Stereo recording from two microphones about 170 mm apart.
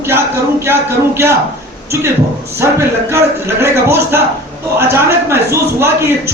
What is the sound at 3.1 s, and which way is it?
A man's voice, 15° right (ahead or behind).